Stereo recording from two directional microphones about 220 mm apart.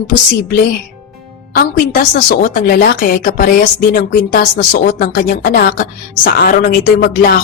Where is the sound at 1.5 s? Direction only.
40° left (ahead or behind).